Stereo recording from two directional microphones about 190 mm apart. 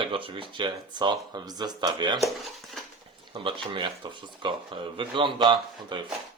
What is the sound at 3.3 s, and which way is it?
Speech, 25° right (ahead or behind).